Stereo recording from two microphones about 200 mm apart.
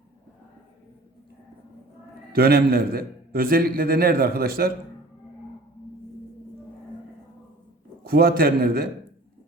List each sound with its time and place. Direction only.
2.3 s a man's voice: 50° right (ahead or behind)
8.0 s a man's voice: 50° right (ahead or behind)